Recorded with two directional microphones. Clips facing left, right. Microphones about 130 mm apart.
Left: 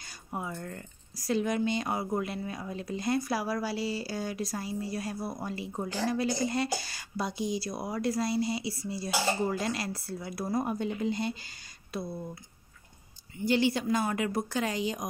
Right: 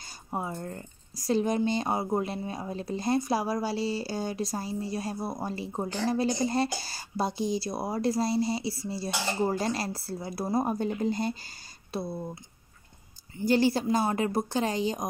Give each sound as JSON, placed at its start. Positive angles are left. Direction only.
{"t": 0.0, "sound": "a woman's voice", "side_deg": -30}
{"t": 11.9, "sound": "speech", "side_deg": -30}
{"t": 13.4, "sound": "a woman's voice", "side_deg": -40}